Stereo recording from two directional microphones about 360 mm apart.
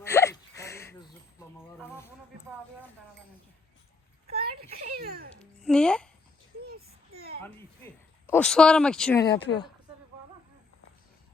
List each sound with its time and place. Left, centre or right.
0.0 s a sound: centre
1.8 s speech: centre
4.3 s a child's voice: right
5.4 s speech: centre
6.7 s a sound: right
8.3 s speech: centre